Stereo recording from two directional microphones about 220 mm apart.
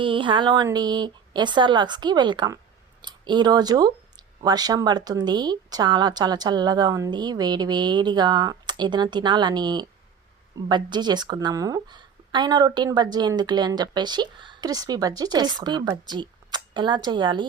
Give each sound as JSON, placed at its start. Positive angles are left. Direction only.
{"t": 0.0, "sound": "a woman's voice", "side_deg": -20}